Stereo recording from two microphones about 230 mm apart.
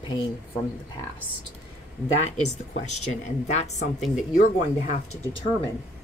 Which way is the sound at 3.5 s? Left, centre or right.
Left.